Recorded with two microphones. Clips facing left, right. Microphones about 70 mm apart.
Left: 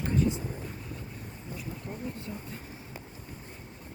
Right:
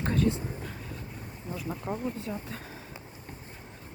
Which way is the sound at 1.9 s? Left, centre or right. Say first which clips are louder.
Right 6 dB; right.